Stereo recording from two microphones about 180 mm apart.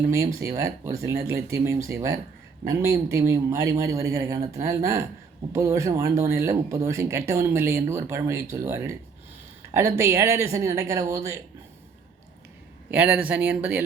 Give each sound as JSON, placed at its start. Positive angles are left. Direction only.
{"t": 0.1, "sound": "speech", "side_deg": -15}
{"t": 10.0, "sound": "speech", "side_deg": -15}
{"t": 12.9, "sound": "speech", "side_deg": -10}